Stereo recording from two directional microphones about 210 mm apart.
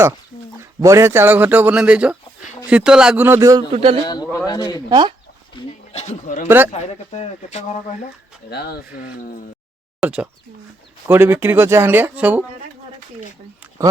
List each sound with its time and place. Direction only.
0.6 s speech: 15° right (ahead or behind)
3.7 s speech: 25° right (ahead or behind)
4.0 s a man's voice: 20° left (ahead or behind)
4.9 s speech: 20° right (ahead or behind)
5.5 s a sound: 30° left (ahead or behind)
6.7 s speech: 30° left (ahead or behind)
8.4 s speech: 50° left (ahead or behind)
10.0 s speech: 5° right (ahead or behind)